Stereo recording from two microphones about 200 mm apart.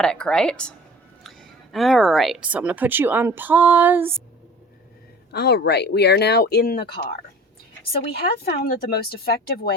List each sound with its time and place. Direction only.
0.0 s a woman's voice: 5° left (ahead or behind)
5.3 s speech: 55° left (ahead or behind)
8.6 s speech: 50° left (ahead or behind)